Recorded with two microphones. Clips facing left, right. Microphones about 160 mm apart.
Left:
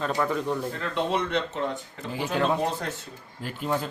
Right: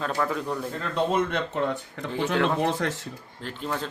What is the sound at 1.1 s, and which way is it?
Speech, 50° right (ahead or behind).